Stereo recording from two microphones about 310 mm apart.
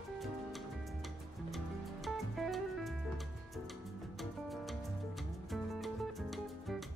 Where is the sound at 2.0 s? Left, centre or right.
Centre.